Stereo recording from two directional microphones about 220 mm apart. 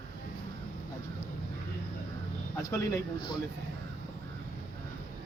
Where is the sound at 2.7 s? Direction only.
15° left (ahead or behind).